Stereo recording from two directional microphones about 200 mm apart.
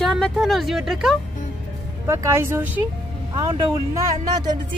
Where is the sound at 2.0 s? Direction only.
15° right (ahead or behind).